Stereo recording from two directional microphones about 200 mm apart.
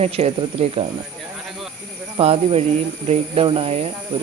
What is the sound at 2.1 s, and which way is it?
Speech, 30° right (ahead or behind).